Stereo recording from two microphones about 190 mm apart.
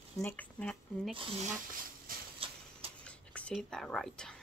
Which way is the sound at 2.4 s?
30° right (ahead or behind).